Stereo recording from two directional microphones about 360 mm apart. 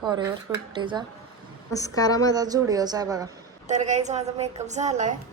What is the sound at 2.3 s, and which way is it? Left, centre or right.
A woman's voice, centre.